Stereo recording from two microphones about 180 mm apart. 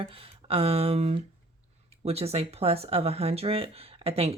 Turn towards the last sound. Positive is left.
turn(degrees=-30)  # may be behind; listen again after turning